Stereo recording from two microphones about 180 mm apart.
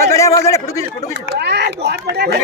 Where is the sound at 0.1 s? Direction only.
15° left (ahead or behind).